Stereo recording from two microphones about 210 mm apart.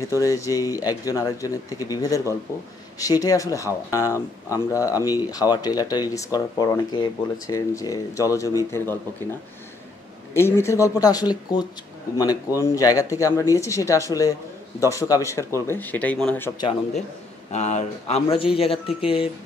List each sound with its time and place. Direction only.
0.1 s speech: 15° left (ahead or behind)
17.5 s speech: 35° left (ahead or behind)